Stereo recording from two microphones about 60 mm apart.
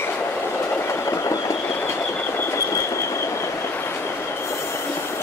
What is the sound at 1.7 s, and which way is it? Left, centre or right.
Train, left.